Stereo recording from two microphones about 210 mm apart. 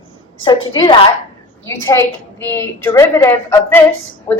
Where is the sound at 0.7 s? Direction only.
25° left (ahead or behind).